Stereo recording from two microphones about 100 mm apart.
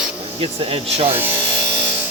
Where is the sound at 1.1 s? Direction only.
20° right (ahead or behind).